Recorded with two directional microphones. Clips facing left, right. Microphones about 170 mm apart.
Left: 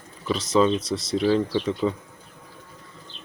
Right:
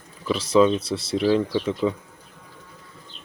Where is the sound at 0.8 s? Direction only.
30° right (ahead or behind).